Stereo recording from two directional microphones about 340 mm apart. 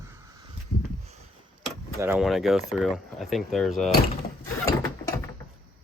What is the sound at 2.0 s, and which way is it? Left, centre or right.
Speech, centre.